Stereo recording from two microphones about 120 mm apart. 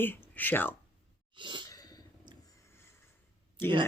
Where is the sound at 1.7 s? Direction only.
30° left (ahead or behind).